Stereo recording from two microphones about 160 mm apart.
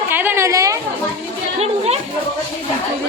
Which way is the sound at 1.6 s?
40° right (ahead or behind).